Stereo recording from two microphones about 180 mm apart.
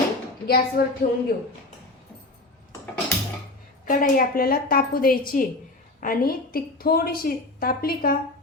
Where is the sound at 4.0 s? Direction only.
55° left (ahead or behind).